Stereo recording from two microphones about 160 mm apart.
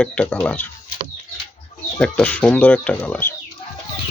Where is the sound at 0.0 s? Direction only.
5° left (ahead or behind).